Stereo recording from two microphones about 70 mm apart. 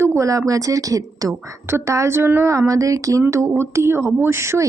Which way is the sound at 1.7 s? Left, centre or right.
Right.